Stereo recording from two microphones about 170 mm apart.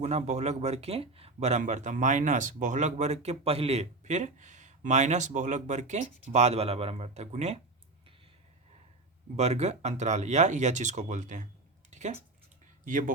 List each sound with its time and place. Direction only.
0.0 s speech: 40° right (ahead or behind)
9.3 s speech: 40° right (ahead or behind)
11.9 s a sound: 45° right (ahead or behind)
12.8 s speech: 50° right (ahead or behind)